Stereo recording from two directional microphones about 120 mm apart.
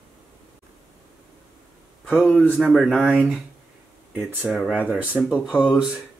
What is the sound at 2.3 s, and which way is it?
Speech, 10° right (ahead or behind).